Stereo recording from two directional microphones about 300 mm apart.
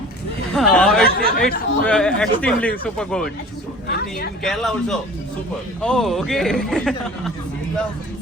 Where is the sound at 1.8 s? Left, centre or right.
Centre.